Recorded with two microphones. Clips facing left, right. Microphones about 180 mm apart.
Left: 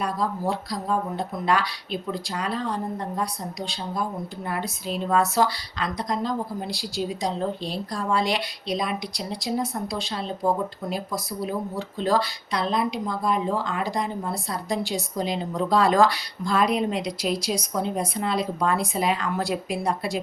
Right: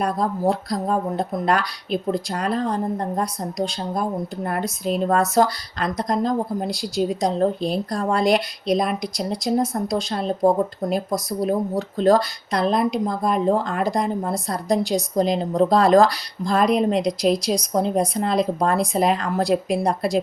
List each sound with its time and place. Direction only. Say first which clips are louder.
0.0 s a woman's voice: right 5 dB; 45° right (ahead or behind)